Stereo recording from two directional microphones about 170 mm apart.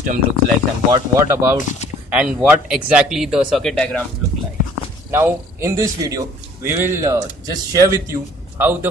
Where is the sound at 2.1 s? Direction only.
5° right (ahead or behind).